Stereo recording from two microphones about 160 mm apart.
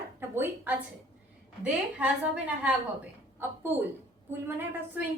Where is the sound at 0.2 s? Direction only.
15° right (ahead or behind).